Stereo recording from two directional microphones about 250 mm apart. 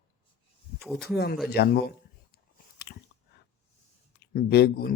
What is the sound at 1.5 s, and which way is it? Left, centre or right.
Speech, left.